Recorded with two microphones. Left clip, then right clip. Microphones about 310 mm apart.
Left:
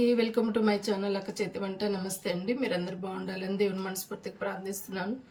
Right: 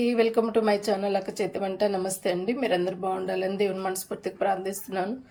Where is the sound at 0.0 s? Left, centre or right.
Centre.